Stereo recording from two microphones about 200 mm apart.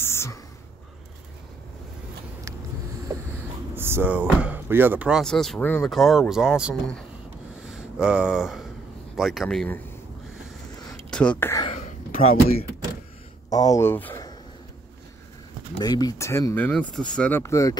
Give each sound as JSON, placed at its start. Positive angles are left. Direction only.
{"t": 0.0, "sound": "whispering", "side_deg": 15}
{"t": 3.7, "sound": "speech", "side_deg": -10}
{"t": 7.6, "sound": "a sound", "side_deg": -5}
{"t": 9.1, "sound": "speech", "side_deg": 0}
{"t": 11.1, "sound": "speech", "side_deg": 5}
{"t": 11.6, "sound": "throat clearing", "side_deg": 30}
{"t": 13.5, "sound": "speech", "side_deg": 20}
{"t": 15.8, "sound": "speech", "side_deg": 20}